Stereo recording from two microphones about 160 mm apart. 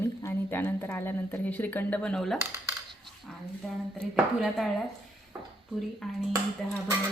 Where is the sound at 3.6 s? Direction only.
5° left (ahead or behind).